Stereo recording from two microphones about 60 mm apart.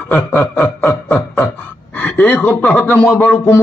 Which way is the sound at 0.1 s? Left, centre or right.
Left.